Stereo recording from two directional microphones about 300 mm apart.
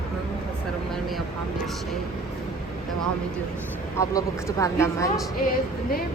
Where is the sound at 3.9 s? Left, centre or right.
Centre.